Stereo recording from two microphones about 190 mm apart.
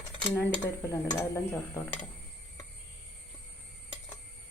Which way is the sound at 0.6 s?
20° left (ahead or behind).